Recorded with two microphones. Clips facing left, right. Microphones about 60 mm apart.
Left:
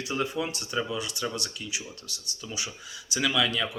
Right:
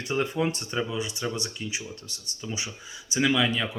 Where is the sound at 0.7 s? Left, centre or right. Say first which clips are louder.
Right 1 dB; right.